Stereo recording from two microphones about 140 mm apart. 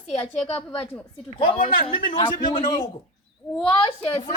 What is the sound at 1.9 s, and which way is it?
A man's voice, 35° left (ahead or behind).